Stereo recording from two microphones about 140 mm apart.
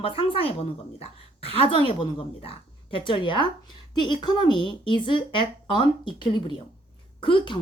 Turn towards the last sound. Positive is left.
turn(degrees=35)  # may be behind; listen again after turning